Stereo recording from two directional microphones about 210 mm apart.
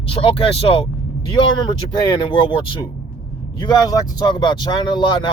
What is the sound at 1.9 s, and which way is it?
Speech, 20° left (ahead or behind).